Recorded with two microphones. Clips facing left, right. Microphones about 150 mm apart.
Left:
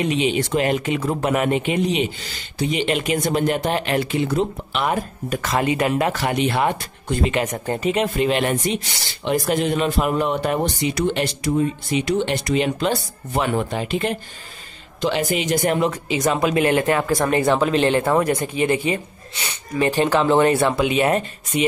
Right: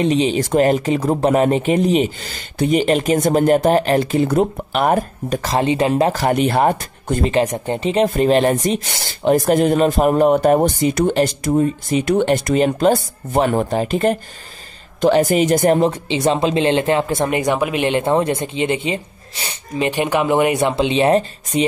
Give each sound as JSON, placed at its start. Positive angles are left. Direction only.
{"t": 0.0, "sound": "speech", "side_deg": -35}
{"t": 5.3, "sound": "speech", "side_deg": -35}
{"t": 7.3, "sound": "speech", "side_deg": -30}
{"t": 20.7, "sound": "speech", "side_deg": -25}